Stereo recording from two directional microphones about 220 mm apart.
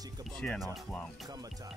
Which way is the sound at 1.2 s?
15° right (ahead or behind).